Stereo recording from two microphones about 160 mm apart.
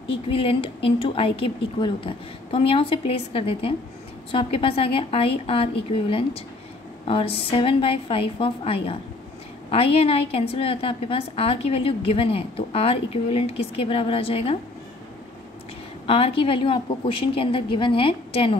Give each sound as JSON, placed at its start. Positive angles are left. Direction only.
{"t": 0.1, "sound": "a woman's voice", "side_deg": 35}
{"t": 16.1, "sound": "a woman's voice", "side_deg": 35}